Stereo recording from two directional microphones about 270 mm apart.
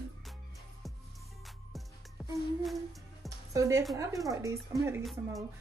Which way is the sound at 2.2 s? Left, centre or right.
Centre.